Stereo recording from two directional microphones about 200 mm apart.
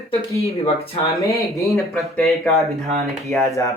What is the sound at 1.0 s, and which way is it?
Speech, 15° left (ahead or behind).